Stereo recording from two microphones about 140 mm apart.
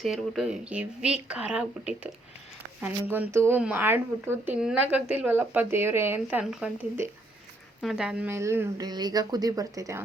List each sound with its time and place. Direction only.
0.0 s speech: centre (ahead or behind)
7.0 s speech: 20° right (ahead or behind)
7.8 s speech: 5° right (ahead or behind)
8.3 s speech: 20° right (ahead or behind)
8.9 s speech: 30° right (ahead or behind)